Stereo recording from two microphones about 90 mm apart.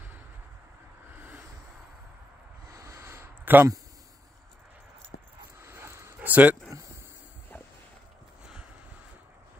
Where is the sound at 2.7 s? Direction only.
35° right (ahead or behind).